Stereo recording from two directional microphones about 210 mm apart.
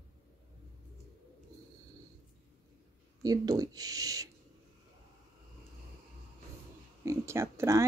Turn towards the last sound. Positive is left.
turn(degrees=-15)  # may be behind; listen again after turning